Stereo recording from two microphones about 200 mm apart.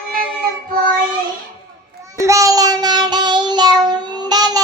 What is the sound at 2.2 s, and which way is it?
Child singing, 15° right (ahead or behind).